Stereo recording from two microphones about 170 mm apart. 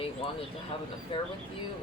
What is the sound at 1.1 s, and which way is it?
Speech, 30° left (ahead or behind).